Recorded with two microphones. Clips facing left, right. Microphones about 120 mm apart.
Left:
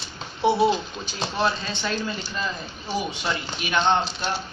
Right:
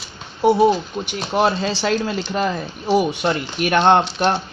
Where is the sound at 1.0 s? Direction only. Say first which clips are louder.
Right 9 dB; 30° right (ahead or behind).